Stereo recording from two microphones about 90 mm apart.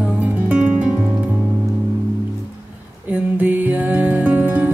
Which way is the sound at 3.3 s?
20° right (ahead or behind).